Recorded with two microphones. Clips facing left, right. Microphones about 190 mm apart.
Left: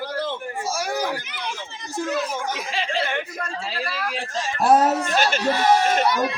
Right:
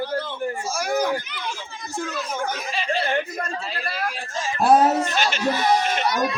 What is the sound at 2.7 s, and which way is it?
Chuckle, 90° left.